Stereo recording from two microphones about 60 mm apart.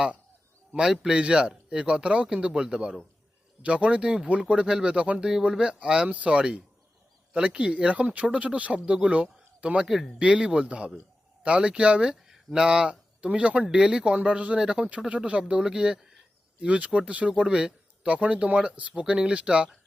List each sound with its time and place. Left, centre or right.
0.7 s speech: centre
9.8 s speech: centre
10.2 s a man's voice: centre